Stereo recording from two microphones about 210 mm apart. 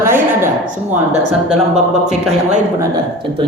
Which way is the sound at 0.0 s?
10° right (ahead or behind).